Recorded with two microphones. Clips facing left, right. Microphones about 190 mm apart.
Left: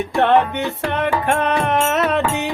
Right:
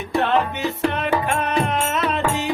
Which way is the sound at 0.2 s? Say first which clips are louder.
Left 5 dB; 60° left (ahead or behind).